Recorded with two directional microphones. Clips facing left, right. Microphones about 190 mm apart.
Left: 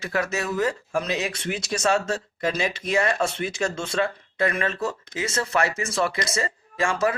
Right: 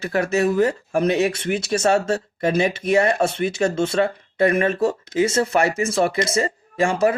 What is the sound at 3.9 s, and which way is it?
Speech, 25° right (ahead or behind).